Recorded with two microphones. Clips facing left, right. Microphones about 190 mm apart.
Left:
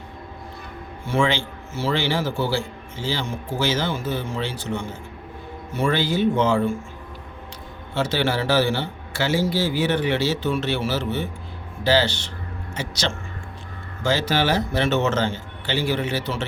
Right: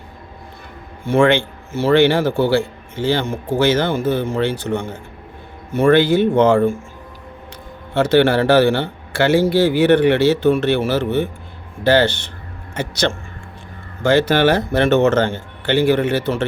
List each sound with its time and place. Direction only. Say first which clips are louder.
1.0 s a man's voice: right 8 dB; 60° right (ahead or behind)
7.9 s a man's voice: right 9 dB; 60° right (ahead or behind)